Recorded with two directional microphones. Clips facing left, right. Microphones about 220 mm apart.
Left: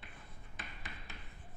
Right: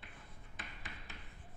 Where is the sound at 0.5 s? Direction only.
15° left (ahead or behind).